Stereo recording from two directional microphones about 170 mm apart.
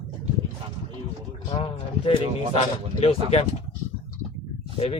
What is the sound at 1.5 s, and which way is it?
Speech, 30° left (ahead or behind).